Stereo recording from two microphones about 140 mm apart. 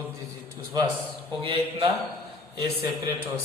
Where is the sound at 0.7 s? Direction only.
30° right (ahead or behind).